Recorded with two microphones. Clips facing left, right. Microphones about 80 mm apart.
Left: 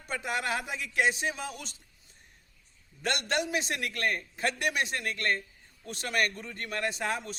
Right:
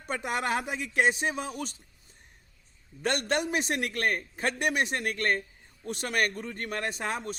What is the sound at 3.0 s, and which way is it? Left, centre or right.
A man's voice, right.